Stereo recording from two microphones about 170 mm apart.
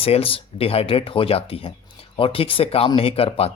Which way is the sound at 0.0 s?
35° left (ahead or behind).